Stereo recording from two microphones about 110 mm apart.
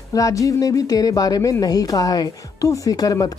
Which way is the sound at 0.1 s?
30° left (ahead or behind).